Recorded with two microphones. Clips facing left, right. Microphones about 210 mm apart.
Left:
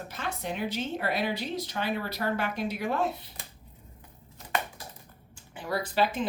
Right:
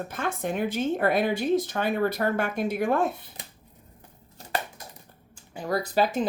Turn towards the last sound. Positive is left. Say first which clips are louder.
# right 3 dB
turn(degrees=-40)  # may be behind; listen again after turning